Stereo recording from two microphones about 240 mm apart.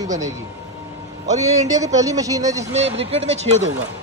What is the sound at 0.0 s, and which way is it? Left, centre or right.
Speech, centre.